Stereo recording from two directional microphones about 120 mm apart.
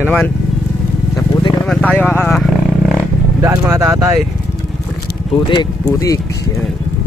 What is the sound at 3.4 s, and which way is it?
Speech, 25° right (ahead or behind).